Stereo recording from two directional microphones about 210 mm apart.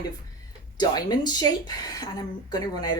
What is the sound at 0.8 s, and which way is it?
A woman's voice, 20° left (ahead or behind).